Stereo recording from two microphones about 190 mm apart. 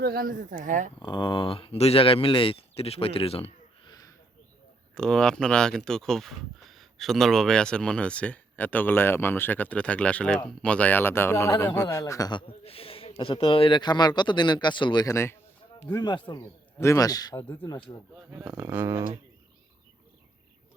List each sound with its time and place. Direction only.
0.0 s speech: 55° right (ahead or behind)
0.9 s speech: 25° left (ahead or behind)
4.9 s speech: 5° left (ahead or behind); by 17.9 s 25° left (ahead or behind)
18.3 s speech: 10° right (ahead or behind)